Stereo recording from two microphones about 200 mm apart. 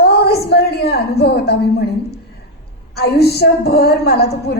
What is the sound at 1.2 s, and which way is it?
A woman's voice, 55° left (ahead or behind).